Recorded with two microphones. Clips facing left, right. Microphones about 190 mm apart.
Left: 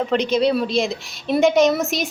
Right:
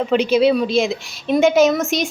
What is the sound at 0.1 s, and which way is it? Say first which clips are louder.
A woman's voice: right 5 dB; 5° right (ahead or behind).